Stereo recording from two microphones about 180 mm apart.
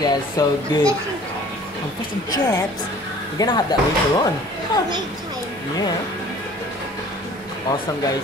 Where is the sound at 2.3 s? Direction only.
20° left (ahead or behind).